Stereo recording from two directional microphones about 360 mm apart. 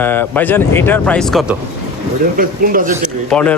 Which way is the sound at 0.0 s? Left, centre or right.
Centre.